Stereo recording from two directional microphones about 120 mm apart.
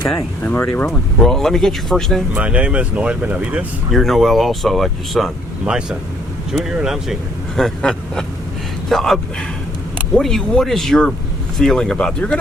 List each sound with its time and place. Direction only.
0.4 s speech: 20° left (ahead or behind)
1.2 s speech: 5° left (ahead or behind)
2.3 s speech: 10° right (ahead or behind)
3.9 s speech: centre (ahead or behind)